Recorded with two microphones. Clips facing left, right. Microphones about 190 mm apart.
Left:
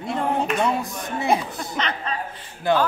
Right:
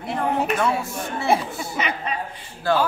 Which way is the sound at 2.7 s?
20° left (ahead or behind).